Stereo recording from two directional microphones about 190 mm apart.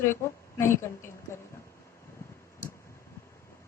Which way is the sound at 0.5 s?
15° left (ahead or behind).